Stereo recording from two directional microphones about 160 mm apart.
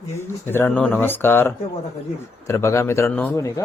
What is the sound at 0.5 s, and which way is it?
Speech, 10° left (ahead or behind).